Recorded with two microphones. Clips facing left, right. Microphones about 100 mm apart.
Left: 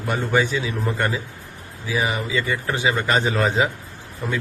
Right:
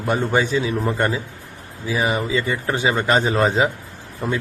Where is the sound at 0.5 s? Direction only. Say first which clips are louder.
Right 4 dB; 30° right (ahead or behind).